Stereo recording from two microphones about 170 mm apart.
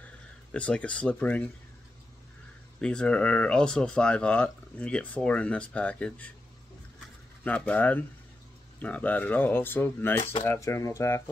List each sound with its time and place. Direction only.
0.0 s speech: 5° left (ahead or behind)
2.8 s speech: 5° left (ahead or behind)
7.4 s speech: 10° left (ahead or behind)